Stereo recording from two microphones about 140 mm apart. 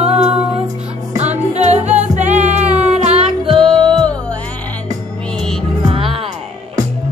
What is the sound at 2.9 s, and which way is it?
Music, 50° right (ahead or behind).